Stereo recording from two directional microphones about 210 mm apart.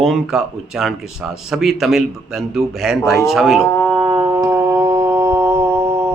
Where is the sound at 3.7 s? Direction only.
10° left (ahead or behind).